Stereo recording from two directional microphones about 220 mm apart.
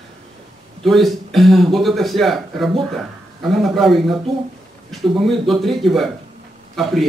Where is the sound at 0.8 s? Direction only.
Centre (ahead or behind).